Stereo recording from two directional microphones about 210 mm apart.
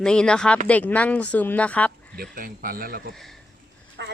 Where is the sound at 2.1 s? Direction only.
45° right (ahead or behind).